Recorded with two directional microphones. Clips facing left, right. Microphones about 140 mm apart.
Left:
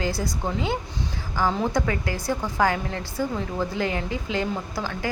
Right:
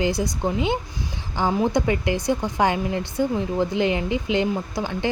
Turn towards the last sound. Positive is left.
turn(degrees=-20)  # may be behind; listen again after turning